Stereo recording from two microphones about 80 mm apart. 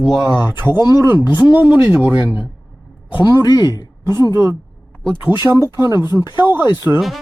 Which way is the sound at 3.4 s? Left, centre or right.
Left.